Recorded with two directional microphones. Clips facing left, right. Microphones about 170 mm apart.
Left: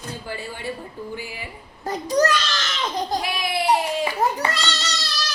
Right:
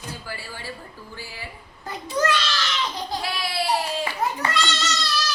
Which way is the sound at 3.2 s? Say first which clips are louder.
Left 3 dB; 15° left (ahead or behind).